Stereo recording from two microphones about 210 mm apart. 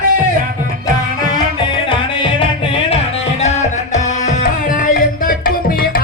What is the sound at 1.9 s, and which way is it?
Music, 25° left (ahead or behind).